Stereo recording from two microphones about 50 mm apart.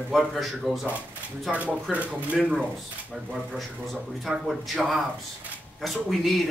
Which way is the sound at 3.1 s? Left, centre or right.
Centre.